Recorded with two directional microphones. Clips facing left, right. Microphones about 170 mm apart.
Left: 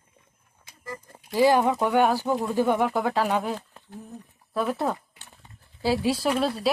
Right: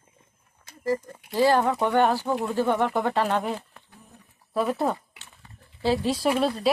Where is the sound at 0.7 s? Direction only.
40° right (ahead or behind).